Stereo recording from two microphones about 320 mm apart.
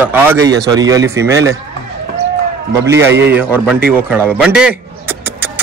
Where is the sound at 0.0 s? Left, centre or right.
Centre.